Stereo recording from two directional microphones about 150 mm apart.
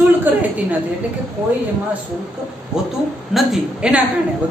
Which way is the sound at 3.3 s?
5° right (ahead or behind).